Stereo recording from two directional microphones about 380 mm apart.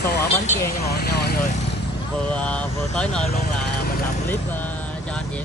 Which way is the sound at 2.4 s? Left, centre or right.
Centre.